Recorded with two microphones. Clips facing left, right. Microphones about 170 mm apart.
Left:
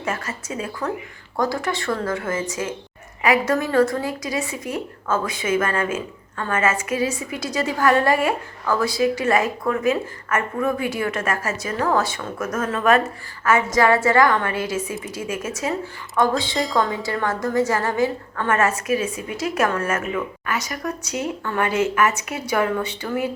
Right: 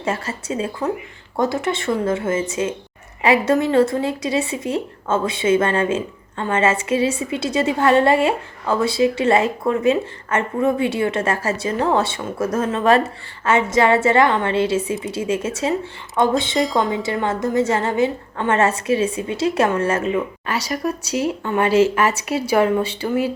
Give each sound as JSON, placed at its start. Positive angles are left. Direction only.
{"t": 0.0, "sound": "a woman's voice", "side_deg": -30}